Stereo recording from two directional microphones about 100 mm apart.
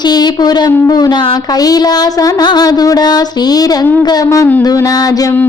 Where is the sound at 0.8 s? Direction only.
40° left (ahead or behind).